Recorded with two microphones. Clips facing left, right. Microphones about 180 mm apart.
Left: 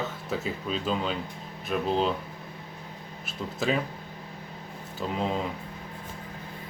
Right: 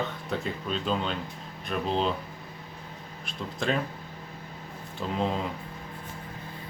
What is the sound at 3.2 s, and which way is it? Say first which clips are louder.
Speech: left 1 dB; 5° left (ahead or behind).